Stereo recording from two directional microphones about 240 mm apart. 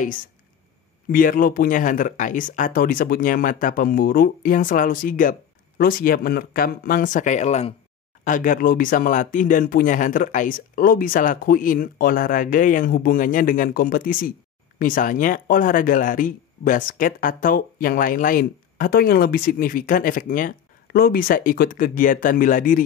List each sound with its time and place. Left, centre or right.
1.1 s speech: left